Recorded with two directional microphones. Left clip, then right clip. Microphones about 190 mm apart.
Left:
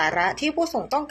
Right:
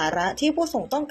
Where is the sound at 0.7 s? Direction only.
10° right (ahead or behind).